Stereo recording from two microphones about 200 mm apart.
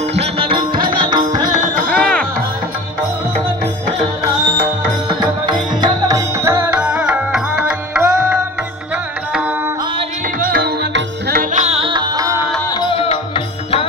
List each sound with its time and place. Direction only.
0.2 s music: 25° right (ahead or behind)
1.9 s music: 5° left (ahead or behind)
5.2 s music: 20° right (ahead or behind)
10.5 s music: 55° right (ahead or behind)
11.5 s music: 30° right (ahead or behind)
12.8 s music: 30° left (ahead or behind)